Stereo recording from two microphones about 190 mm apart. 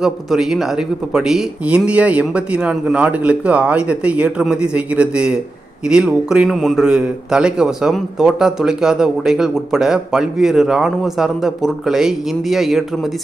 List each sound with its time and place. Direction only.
0.0 s a man's voice: centre (ahead or behind)